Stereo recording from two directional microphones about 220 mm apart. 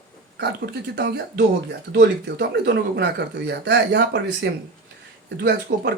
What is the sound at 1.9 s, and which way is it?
Speech, 50° right (ahead or behind).